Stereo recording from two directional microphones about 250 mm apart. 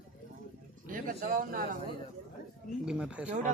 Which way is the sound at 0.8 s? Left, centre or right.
Right.